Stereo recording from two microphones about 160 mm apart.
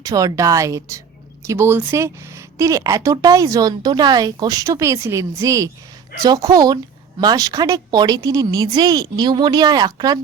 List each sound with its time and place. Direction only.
0.0 s speech: 20° right (ahead or behind)